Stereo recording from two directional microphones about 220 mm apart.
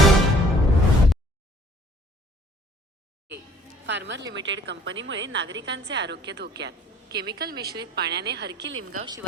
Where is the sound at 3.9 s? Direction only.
55° right (ahead or behind).